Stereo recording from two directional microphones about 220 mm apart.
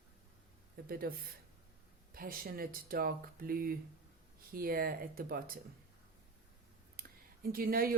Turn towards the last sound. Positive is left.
turn(degrees=-40)  # may be behind; listen again after turning